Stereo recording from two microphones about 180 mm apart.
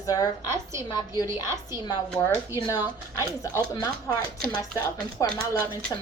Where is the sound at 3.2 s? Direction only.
15° left (ahead or behind).